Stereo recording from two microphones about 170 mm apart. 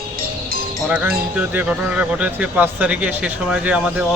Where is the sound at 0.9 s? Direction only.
5° right (ahead or behind).